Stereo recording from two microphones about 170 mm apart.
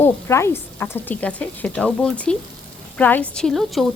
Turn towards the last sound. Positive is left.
turn(degrees=0)  # may be behind; listen again after turning